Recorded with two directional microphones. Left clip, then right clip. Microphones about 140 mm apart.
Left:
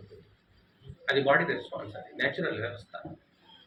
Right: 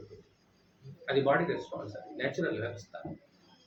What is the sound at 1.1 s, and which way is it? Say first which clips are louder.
Speech: left 3 dB; 15° right (ahead or behind).